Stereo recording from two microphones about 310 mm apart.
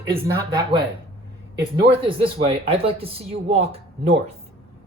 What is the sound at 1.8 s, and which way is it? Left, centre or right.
Speech, centre.